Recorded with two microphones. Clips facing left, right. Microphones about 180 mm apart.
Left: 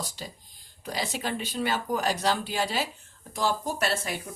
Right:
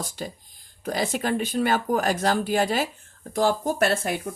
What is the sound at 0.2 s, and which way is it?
Speech, 55° right (ahead or behind).